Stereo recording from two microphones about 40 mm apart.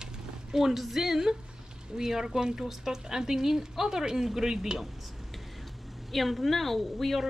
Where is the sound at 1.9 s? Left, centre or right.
Centre.